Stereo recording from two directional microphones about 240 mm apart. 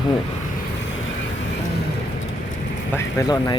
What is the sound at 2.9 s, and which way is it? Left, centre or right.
Speech, centre.